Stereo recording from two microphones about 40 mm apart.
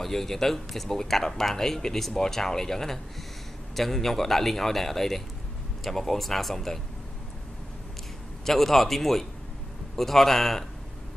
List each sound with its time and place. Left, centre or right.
0.0 s a man's voice: centre
8.5 s a man's voice: centre